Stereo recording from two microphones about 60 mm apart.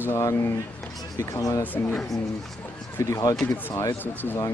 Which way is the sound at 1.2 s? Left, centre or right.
Left.